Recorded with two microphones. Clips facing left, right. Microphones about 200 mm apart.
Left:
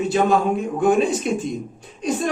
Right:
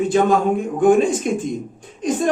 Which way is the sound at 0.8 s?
50° right (ahead or behind).